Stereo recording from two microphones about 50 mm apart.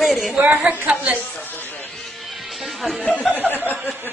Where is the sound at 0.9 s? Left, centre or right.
Right.